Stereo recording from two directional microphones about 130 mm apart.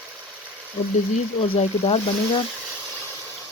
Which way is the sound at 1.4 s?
50° left (ahead or behind).